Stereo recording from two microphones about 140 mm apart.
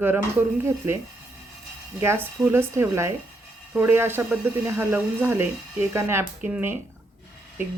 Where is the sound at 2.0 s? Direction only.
15° right (ahead or behind).